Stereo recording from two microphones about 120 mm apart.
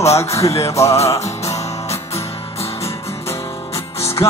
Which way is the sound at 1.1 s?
65° left (ahead or behind).